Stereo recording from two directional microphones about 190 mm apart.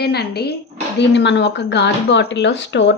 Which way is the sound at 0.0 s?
60° left (ahead or behind).